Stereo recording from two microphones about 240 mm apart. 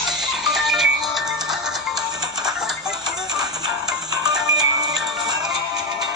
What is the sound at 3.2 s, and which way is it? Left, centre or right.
Music, centre.